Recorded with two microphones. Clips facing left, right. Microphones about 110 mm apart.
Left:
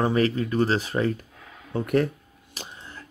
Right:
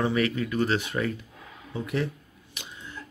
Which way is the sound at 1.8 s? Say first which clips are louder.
Left 7 dB; 50° left (ahead or behind).